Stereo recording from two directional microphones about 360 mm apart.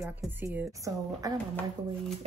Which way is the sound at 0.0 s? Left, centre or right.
Centre.